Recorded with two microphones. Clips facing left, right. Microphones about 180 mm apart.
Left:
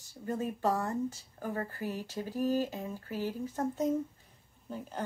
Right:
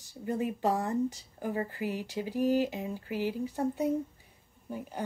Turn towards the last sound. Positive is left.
turn(degrees=-10)  # may be behind; listen again after turning